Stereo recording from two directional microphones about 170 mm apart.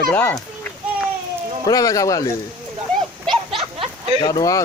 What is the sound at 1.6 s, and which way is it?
Speech, 20° left (ahead or behind).